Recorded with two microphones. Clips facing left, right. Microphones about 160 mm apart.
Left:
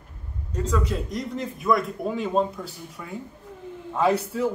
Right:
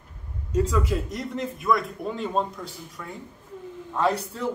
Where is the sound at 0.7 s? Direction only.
5° right (ahead or behind).